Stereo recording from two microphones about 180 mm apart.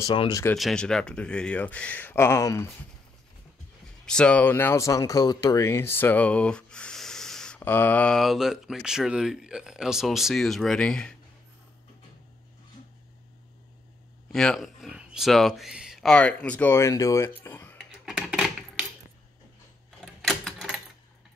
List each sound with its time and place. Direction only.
0.0 s speech: 25° left (ahead or behind)
0.6 s speech: centre (ahead or behind)
4.0 s speech: 5° left (ahead or behind)
14.3 s speech: 5° left (ahead or behind)
17.7 s a sound: centre (ahead or behind)
20.2 s typewriter: centre (ahead or behind)